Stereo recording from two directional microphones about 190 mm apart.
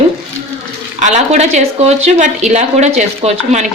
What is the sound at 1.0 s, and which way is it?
A woman's voice, 40° right (ahead or behind).